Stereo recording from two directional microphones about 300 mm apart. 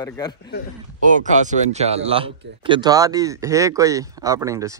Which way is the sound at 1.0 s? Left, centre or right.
Right.